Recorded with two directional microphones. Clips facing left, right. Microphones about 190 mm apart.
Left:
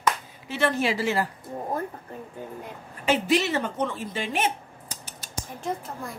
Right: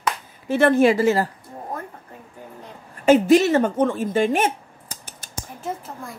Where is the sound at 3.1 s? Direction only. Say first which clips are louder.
Right 9 dB; 45° right (ahead or behind).